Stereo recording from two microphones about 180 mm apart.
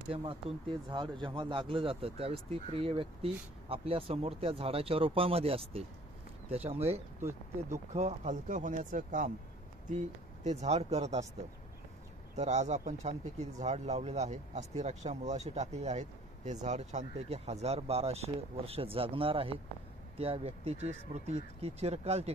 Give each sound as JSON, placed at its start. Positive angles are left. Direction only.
{"t": 0.1, "sound": "speech", "side_deg": -30}
{"t": 7.2, "sound": "speech", "side_deg": -15}
{"t": 7.9, "sound": "speech", "side_deg": -40}
{"t": 12.4, "sound": "speech", "side_deg": -40}